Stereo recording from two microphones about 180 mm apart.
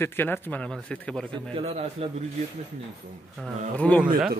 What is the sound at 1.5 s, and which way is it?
Speech, 35° right (ahead or behind).